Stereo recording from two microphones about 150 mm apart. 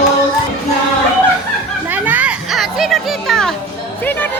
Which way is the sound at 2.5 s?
Centre (ahead or behind).